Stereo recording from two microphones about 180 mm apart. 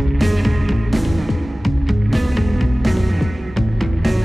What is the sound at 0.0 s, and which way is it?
Music, centre (ahead or behind).